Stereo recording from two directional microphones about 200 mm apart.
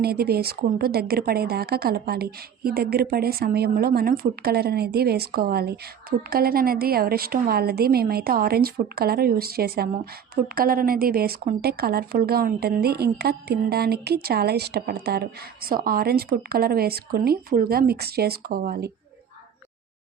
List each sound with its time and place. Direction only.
0.0 s speech: 50° right (ahead or behind)